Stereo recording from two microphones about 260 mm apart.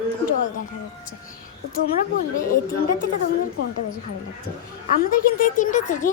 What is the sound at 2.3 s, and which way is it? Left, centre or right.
Speech, left.